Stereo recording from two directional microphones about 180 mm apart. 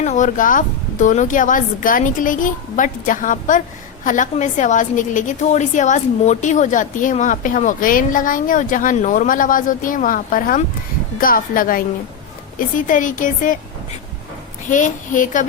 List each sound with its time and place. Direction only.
0.0 s a woman's voice: 40° left (ahead or behind)
14.7 s a woman's voice: 45° left (ahead or behind)